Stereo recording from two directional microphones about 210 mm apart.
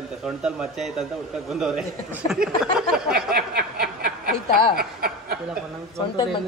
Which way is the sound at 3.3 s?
45° right (ahead or behind).